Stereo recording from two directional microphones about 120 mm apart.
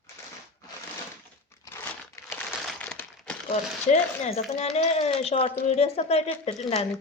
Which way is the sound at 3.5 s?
70° left (ahead or behind).